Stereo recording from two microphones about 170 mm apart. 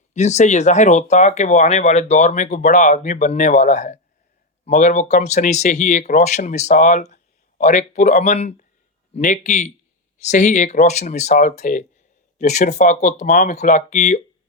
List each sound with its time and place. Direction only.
0.1 s speech: 40° left (ahead or behind)